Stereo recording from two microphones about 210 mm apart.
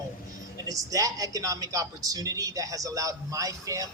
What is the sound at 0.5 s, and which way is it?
Speech, 15° right (ahead or behind).